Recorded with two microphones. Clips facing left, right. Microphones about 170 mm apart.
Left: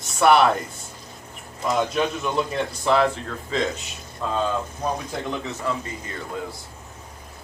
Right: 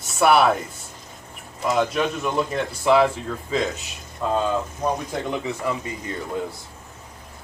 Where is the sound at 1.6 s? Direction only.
5° right (ahead or behind).